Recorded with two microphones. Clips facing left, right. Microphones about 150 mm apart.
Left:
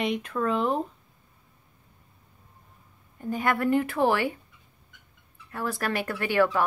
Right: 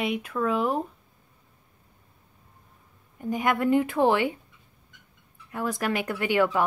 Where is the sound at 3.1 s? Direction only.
15° right (ahead or behind).